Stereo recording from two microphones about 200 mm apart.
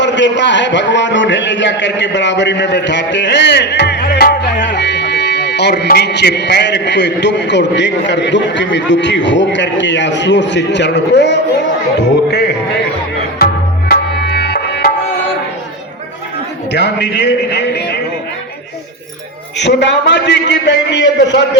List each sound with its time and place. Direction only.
0.0 s a man's voice: 65° left (ahead or behind)
11.9 s music: 55° left (ahead or behind)
13.9 s music: 55° left (ahead or behind)
16.7 s a man's voice: 60° left (ahead or behind)
19.5 s a man's voice: 60° left (ahead or behind)